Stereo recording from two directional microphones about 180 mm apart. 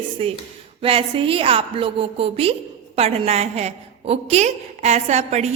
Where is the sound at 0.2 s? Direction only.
35° right (ahead or behind).